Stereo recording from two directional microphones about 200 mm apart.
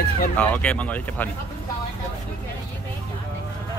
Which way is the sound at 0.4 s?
5° left (ahead or behind).